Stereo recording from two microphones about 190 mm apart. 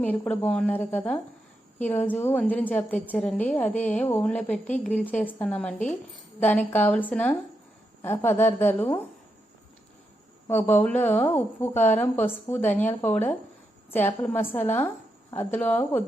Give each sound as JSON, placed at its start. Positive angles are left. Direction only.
{"t": 0.0, "sound": "a woman's voice", "side_deg": 5}
{"t": 10.4, "sound": "a woman's voice", "side_deg": 10}